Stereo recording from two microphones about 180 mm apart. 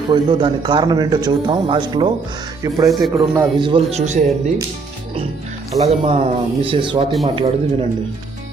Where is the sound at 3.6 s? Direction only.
30° right (ahead or behind).